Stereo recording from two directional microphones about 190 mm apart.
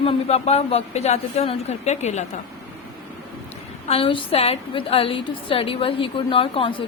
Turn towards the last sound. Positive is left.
turn(degrees=30)  # may be behind; listen again after turning